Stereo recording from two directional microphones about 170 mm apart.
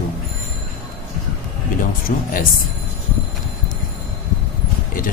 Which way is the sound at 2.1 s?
55° left (ahead or behind).